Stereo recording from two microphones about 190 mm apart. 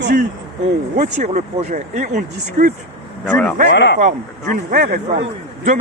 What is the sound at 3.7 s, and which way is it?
Speech, 65° left (ahead or behind).